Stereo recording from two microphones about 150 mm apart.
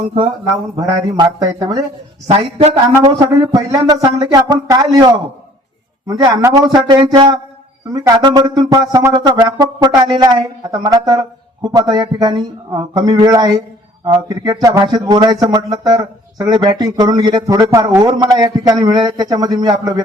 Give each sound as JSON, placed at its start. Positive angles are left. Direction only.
{"t": 0.8, "sound": "speech", "side_deg": -25}
{"t": 2.2, "sound": "speech", "side_deg": -40}
{"t": 3.1, "sound": "speech", "side_deg": -25}